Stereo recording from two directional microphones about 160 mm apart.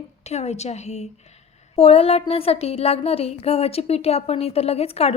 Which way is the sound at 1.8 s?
40° left (ahead or behind).